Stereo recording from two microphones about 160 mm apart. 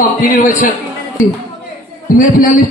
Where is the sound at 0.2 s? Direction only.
55° left (ahead or behind).